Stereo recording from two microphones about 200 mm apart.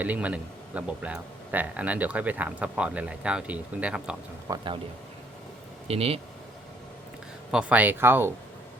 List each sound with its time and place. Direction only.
0.0 s speech: 5° right (ahead or behind)
4.4 s speech: 20° right (ahead or behind)
5.9 s speech: 30° right (ahead or behind)
7.5 s speech: 5° right (ahead or behind)